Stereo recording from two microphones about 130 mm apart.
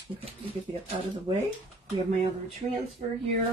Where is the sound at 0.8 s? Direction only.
40° right (ahead or behind).